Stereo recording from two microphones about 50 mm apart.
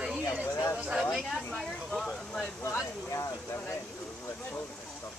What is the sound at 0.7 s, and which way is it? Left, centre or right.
Speech, centre.